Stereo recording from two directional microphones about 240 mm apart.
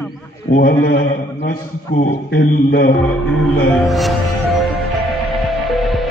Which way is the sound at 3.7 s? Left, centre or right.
Centre.